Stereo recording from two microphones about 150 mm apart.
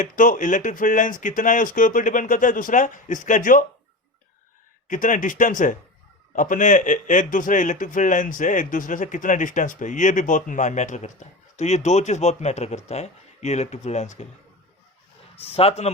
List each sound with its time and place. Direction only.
0.0 s a man's voice: 60° left (ahead or behind)
4.9 s a man's voice: 60° left (ahead or behind)
15.4 s speech: 40° left (ahead or behind)